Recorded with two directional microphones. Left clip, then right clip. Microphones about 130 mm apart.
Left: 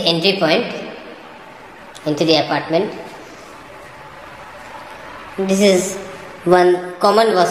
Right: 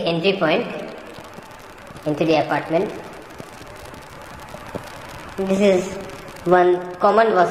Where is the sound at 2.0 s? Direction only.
15° left (ahead or behind).